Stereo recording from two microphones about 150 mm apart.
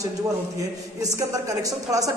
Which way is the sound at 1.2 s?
20° right (ahead or behind).